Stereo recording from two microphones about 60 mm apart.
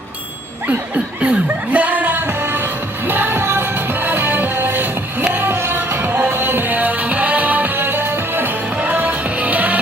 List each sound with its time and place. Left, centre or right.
0.7 s music: right